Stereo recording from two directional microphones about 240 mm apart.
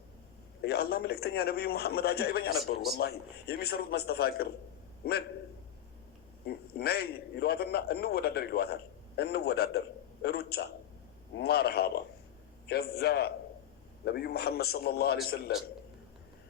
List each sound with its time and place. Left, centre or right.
0.6 s a man's voice: left
6.4 s a man's voice: left